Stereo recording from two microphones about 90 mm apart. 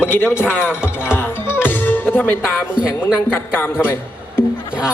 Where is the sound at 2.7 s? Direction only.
10° right (ahead or behind).